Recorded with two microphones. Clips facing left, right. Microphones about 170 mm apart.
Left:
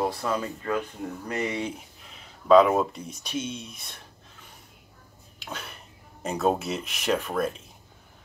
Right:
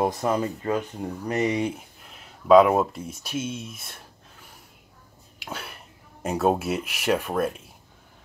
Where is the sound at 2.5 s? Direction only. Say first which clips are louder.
Right 2 dB; 10° right (ahead or behind).